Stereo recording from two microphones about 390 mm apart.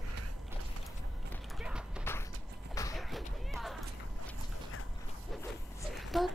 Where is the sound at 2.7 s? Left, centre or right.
Centre.